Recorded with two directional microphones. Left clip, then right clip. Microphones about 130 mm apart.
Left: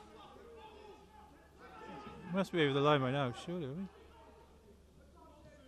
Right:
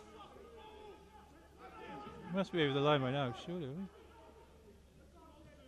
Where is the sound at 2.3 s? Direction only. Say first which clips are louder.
Left 2 dB; 20° left (ahead or behind).